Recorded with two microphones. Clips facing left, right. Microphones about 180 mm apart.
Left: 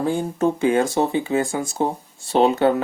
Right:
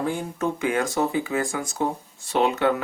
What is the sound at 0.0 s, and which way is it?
Speech, 30° left (ahead or behind).